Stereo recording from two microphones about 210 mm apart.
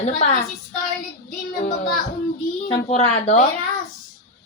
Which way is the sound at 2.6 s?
30° left (ahead or behind).